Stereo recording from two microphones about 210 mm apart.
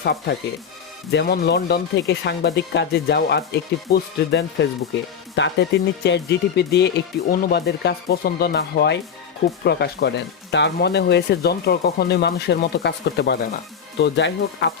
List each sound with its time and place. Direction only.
0.0 s speech: 50° left (ahead or behind)